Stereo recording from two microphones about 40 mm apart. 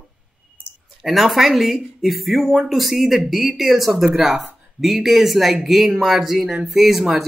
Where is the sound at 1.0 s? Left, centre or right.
Centre.